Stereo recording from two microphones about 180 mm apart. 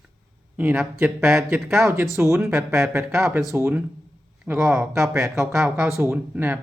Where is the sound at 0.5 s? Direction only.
10° right (ahead or behind).